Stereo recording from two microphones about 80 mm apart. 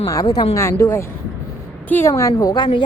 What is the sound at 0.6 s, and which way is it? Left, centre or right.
Speech, left.